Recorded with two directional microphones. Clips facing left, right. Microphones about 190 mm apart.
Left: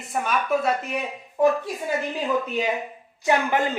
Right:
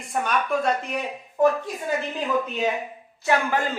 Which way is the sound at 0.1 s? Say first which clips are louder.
Left 1 dB; centre (ahead or behind).